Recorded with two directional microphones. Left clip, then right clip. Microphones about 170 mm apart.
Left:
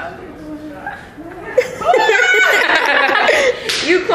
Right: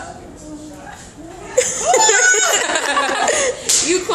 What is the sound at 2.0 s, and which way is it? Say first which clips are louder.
Laughter: left 3 dB; centre (ahead or behind).